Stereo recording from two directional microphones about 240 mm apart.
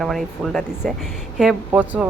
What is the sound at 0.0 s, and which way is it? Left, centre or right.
Speech, centre.